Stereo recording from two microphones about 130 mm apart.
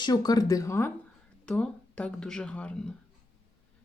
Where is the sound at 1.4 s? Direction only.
10° left (ahead or behind).